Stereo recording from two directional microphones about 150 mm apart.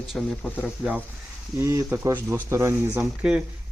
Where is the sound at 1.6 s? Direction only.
15° right (ahead or behind).